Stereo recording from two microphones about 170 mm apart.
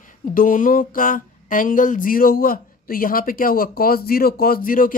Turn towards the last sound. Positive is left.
turn(degrees=55)  # may be behind; listen again after turning